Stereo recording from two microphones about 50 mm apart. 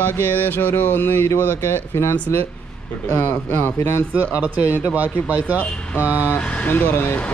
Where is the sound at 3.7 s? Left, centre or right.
Left.